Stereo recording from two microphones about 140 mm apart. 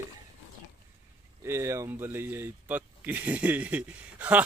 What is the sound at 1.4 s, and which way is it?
Speech, 20° right (ahead or behind).